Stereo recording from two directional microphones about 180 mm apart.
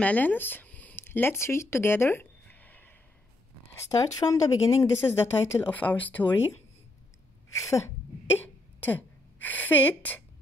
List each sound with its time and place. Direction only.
0.0 s a woman's voice: 10° left (ahead or behind)
7.5 s a woman's voice: 15° left (ahead or behind)
9.4 s a woman's voice: 10° left (ahead or behind)